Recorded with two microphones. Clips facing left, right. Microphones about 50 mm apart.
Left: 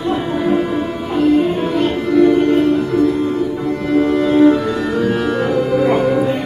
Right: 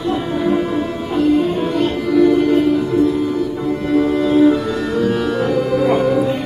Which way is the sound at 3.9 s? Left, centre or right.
Centre.